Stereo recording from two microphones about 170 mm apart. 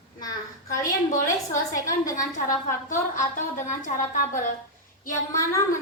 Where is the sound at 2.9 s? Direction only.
50° left (ahead or behind).